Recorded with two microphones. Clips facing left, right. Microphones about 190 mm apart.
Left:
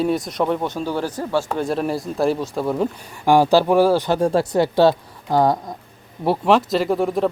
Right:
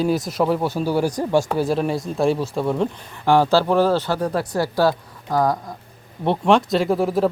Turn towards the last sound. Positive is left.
turn(degrees=0)  # may be behind; listen again after turning